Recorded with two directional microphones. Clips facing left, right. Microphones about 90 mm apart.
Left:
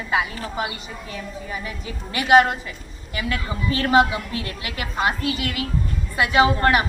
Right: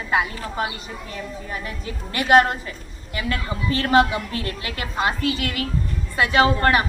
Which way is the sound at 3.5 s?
20° left (ahead or behind).